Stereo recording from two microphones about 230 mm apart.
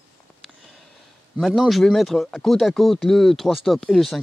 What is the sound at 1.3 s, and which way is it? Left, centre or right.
Speech, centre.